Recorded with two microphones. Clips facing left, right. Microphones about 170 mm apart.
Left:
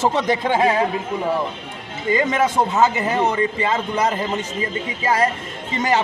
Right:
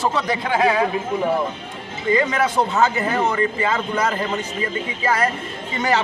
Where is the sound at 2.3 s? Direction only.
20° left (ahead or behind).